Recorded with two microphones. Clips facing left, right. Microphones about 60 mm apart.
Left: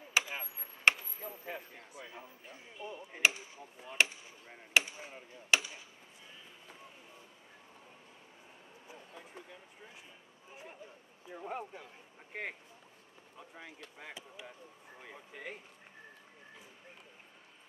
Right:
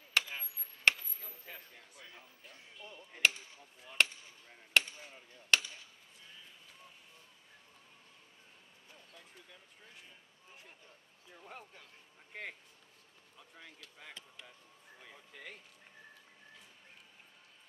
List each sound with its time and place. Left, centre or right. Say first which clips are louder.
0.1 s a sound: left 1 dB; centre
2.4 s chop: left 7 dB; centre
4.7 s hammer: left 1 dB; centre
8.8 s speech: left 7 dB; centre
11.2 s speech: left 11 dB; left
13.9 s speech: left 3 dB; centre